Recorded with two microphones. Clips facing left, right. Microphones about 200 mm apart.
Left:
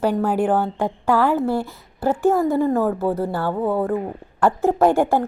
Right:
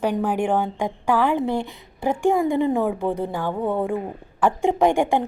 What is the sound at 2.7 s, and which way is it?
Speech, centre (ahead or behind).